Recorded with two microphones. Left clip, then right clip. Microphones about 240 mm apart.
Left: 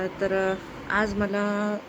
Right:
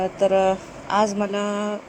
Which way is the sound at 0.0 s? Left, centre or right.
Centre.